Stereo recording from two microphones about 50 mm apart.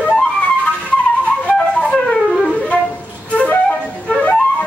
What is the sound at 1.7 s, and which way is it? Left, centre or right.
Wind instrument, centre.